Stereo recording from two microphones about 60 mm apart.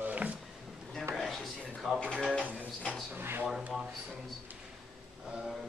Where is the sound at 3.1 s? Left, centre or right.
Right.